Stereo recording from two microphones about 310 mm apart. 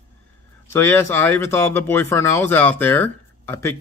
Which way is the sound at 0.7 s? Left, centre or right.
Centre.